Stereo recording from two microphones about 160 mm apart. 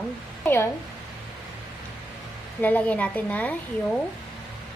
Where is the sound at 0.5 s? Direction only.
15° left (ahead or behind).